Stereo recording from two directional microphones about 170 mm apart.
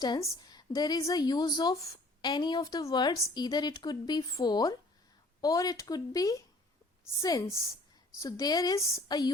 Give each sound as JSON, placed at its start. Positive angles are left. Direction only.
{"t": 0.0, "sound": "a woman's voice", "side_deg": 20}